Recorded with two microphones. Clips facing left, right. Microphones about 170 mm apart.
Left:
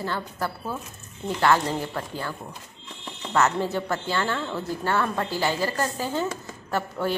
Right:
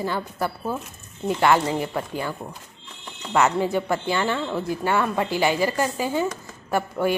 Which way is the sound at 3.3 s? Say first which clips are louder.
Right 3 dB; 15° right (ahead or behind).